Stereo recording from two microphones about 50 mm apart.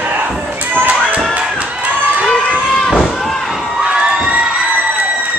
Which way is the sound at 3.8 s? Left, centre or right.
Centre.